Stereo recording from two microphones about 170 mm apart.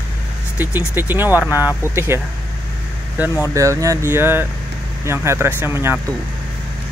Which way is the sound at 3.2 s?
10° right (ahead or behind).